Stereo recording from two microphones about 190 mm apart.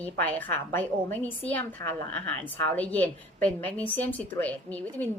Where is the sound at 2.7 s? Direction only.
10° left (ahead or behind).